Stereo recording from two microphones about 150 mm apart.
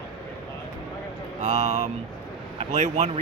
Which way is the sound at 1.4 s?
45° right (ahead or behind).